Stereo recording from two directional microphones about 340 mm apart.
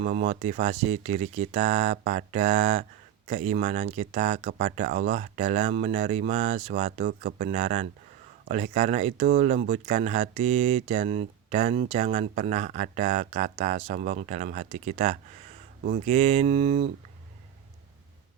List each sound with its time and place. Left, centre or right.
0.0 s speech: right